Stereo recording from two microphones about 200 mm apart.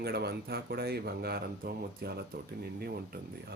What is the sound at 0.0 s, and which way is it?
Speech, 55° right (ahead or behind).